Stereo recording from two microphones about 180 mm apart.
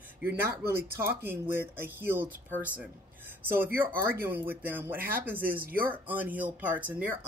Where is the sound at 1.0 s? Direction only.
10° right (ahead or behind).